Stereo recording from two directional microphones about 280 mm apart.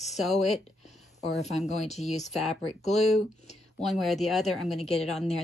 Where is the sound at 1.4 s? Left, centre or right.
Left.